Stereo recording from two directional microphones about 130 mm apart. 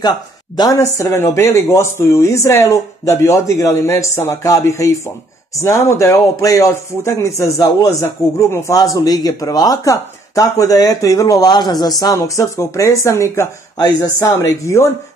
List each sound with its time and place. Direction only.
0.6 s speech: 25° left (ahead or behind)